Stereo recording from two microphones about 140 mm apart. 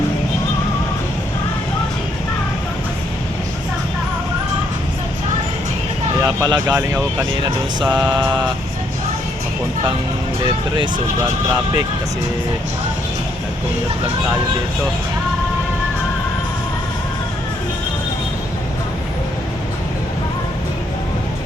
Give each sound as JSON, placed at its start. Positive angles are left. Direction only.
{"t": 6.2, "sound": "speech", "side_deg": -25}
{"t": 7.9, "sound": "mantra", "side_deg": -10}